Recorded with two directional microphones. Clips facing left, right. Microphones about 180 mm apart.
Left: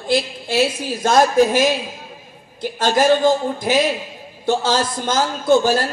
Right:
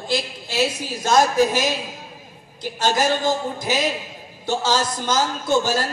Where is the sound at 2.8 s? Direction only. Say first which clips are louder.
Left 5 dB; 50° left (ahead or behind).